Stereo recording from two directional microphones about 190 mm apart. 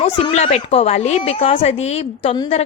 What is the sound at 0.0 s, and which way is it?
A woman's voice, 35° left (ahead or behind).